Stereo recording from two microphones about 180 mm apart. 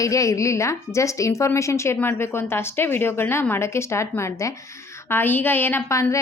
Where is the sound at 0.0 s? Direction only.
20° left (ahead or behind).